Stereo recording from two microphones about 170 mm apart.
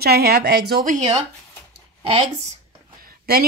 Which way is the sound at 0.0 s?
70° right (ahead or behind).